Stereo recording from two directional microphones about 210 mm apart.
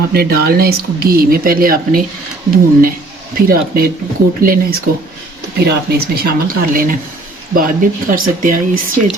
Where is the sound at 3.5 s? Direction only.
45° right (ahead or behind).